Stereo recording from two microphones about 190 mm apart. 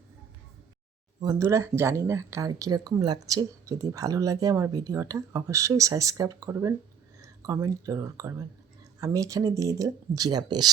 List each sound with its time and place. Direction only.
1.2 s speech: 20° right (ahead or behind)